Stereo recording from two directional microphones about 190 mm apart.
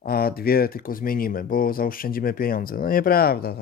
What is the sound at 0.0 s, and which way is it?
Speech, 50° left (ahead or behind).